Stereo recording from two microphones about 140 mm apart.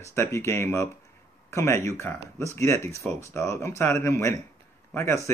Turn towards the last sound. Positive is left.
turn(degrees=20)  # may be behind; listen again after turning